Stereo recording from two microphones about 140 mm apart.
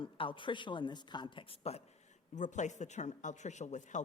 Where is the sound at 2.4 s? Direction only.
60° left (ahead or behind).